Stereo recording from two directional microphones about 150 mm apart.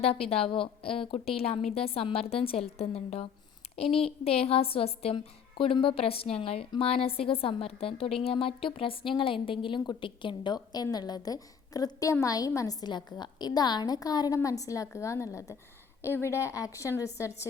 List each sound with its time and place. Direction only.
0.0 s a woman's voice: 40° left (ahead or behind); by 17.5 s 20° left (ahead or behind)